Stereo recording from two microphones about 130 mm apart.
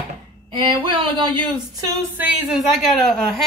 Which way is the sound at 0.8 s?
40° right (ahead or behind).